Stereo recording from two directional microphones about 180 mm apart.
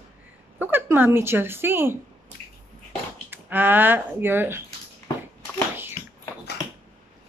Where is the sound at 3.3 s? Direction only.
10° right (ahead or behind).